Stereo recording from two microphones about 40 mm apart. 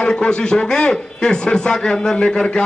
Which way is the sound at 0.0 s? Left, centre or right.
Left.